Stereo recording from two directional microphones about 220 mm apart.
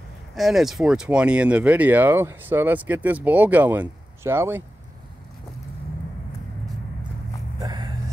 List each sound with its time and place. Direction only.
0.4 s speech: centre (ahead or behind)
7.6 s vehicle: 20° right (ahead or behind)